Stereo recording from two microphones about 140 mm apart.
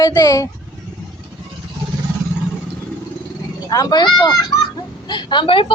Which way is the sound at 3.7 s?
30° left (ahead or behind).